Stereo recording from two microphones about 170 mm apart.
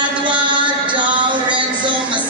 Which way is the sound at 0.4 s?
30° right (ahead or behind).